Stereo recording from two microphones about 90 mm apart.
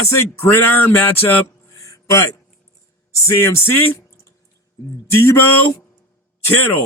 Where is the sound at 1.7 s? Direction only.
35° left (ahead or behind).